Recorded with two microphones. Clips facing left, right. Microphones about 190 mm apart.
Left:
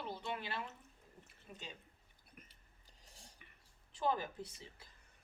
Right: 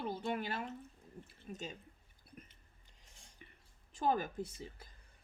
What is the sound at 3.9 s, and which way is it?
Speech, 45° right (ahead or behind).